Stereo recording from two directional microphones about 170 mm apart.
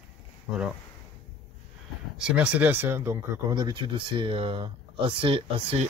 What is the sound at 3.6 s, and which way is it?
Speech, 25° right (ahead or behind).